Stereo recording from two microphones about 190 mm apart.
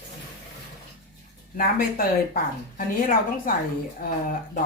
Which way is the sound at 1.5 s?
50° left (ahead or behind).